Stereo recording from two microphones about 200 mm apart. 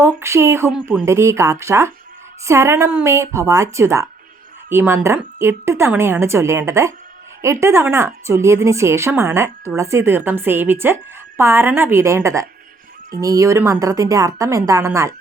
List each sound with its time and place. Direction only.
0.0 s speech: 15° right (ahead or behind)
0.7 s speech: 5° right (ahead or behind)
1.0 s speech: 15° right (ahead or behind)